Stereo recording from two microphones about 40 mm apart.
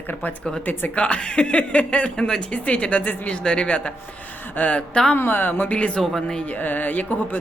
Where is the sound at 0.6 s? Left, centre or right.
Left.